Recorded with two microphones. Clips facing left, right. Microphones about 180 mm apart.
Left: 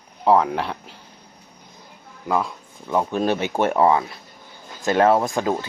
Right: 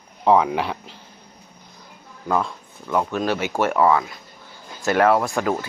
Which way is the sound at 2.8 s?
20° left (ahead or behind).